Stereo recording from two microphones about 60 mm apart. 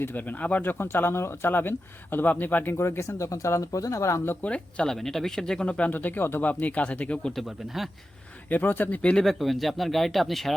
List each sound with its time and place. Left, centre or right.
0.0 s speech: left
2.7 s speech: left
3.2 s speech: left
4.4 s speech: centre
4.9 s speech: centre
5.6 s speech: left
5.9 s speech: left
6.4 s speech: left
8.4 s speech: left
9.0 s speech: centre
9.2 s speech: centre